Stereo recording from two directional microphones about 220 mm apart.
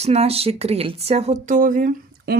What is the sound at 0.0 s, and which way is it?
Speech, 30° right (ahead or behind).